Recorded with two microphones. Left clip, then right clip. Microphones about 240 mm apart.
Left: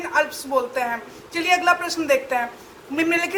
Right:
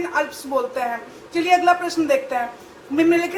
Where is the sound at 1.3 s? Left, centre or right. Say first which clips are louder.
Right 2 dB; left.